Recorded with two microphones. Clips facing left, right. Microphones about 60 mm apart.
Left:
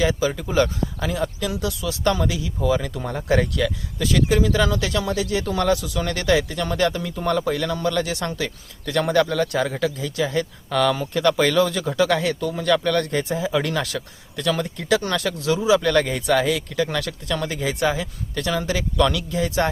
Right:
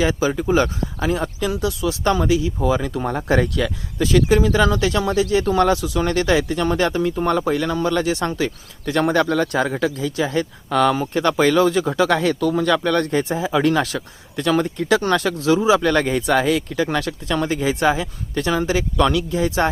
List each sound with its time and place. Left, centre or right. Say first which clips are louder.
0.0 s speech: right 2 dB; right
12.4 s speech: right 7 dB; right
12.6 s speech: right 2 dB; right